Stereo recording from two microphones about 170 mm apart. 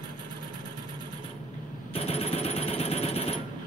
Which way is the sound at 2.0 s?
35° left (ahead or behind).